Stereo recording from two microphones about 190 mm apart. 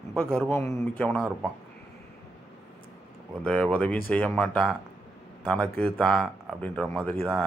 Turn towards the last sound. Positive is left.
turn(degrees=5)  # may be behind; listen again after turning